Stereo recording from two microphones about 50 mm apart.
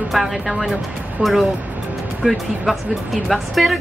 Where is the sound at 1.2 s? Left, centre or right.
Right.